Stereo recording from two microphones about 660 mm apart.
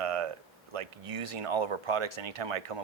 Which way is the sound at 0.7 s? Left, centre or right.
Right.